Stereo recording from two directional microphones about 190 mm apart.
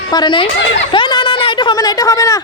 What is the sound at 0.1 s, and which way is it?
Speech, 25° left (ahead or behind).